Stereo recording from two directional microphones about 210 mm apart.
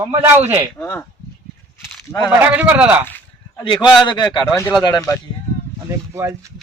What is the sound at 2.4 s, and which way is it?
Speech, 10° right (ahead or behind).